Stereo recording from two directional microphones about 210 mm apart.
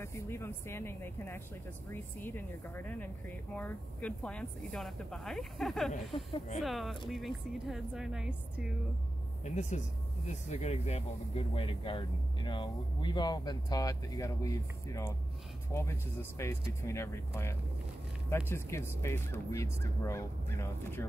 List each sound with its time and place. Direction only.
0.0 s speech: 10° left (ahead or behind)
6.1 s speech: 25° left (ahead or behind)
6.6 s speech: centre (ahead or behind)
9.4 s speech: 35° left (ahead or behind); by 21.1 s 15° left (ahead or behind)